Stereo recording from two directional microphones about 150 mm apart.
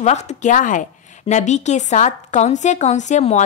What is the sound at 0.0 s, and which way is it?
A woman's voice, 50° left (ahead or behind).